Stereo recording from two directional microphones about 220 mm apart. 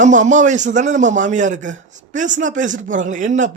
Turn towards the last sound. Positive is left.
turn(degrees=-35)  # may be behind; listen again after turning